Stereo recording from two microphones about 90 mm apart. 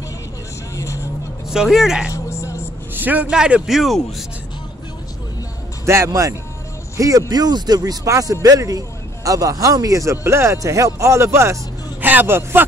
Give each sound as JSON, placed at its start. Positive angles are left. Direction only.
{"t": 0.7, "sound": "vehicle", "side_deg": 35}
{"t": 1.5, "sound": "speech", "side_deg": -5}
{"t": 2.0, "sound": "vehicle", "side_deg": 30}
{"t": 2.9, "sound": "speech", "side_deg": -20}
{"t": 5.9, "sound": "speech", "side_deg": -35}
{"t": 12.0, "sound": "a man's voice", "side_deg": -20}